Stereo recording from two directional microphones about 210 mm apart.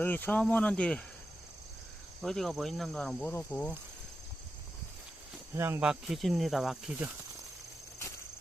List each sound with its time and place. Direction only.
0.0 s speech: 10° left (ahead or behind)
2.2 s speech: centre (ahead or behind)
5.5 s speech: 10° right (ahead or behind)